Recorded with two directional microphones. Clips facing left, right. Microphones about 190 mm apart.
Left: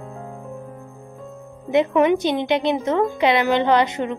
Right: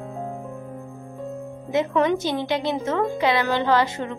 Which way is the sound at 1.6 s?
20° left (ahead or behind).